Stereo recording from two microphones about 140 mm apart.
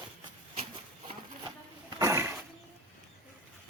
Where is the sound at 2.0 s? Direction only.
20° right (ahead or behind).